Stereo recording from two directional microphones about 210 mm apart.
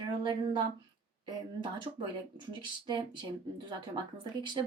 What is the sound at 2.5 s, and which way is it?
Speech, 20° right (ahead or behind).